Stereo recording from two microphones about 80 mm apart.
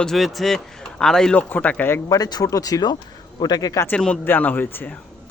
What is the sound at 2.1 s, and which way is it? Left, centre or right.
Speech, left.